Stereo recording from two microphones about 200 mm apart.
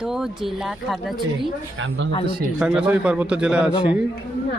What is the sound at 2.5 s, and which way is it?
Speech, 5° right (ahead or behind).